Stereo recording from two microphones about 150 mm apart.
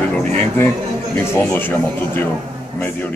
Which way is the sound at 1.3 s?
15° left (ahead or behind).